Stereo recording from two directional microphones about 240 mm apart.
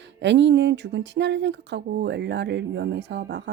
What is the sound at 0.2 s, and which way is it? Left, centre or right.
Speech, right.